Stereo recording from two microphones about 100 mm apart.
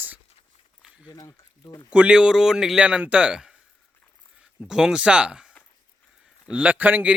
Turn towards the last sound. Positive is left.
turn(degrees=-15)  # may be behind; listen again after turning